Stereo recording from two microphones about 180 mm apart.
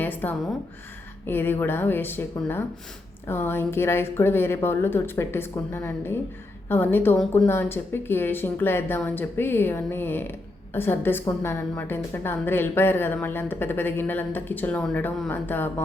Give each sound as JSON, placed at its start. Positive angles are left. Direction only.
{"t": 0.0, "sound": "a woman's voice", "side_deg": 10}